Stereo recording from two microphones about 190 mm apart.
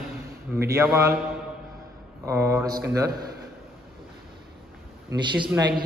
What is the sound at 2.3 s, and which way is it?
Speech, 15° right (ahead or behind).